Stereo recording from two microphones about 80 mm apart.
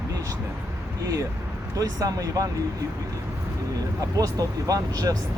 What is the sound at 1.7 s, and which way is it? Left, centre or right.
Speech, right.